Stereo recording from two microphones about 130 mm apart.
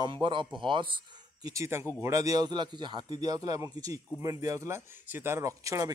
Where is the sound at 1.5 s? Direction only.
20° right (ahead or behind).